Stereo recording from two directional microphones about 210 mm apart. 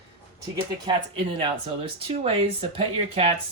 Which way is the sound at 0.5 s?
25° right (ahead or behind).